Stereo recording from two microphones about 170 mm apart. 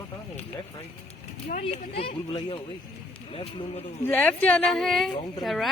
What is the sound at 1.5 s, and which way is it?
Speech, 40° left (ahead or behind).